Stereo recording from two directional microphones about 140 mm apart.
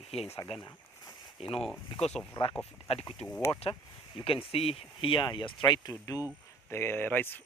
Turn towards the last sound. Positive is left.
turn(degrees=15)  # may be behind; listen again after turning